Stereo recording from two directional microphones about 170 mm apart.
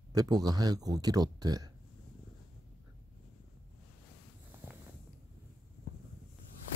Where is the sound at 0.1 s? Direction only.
20° right (ahead or behind).